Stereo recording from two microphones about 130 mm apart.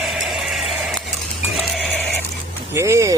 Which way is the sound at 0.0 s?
Centre (ahead or behind).